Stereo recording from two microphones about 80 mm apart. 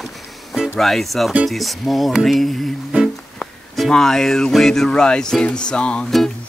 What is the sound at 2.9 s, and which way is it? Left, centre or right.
Music, centre.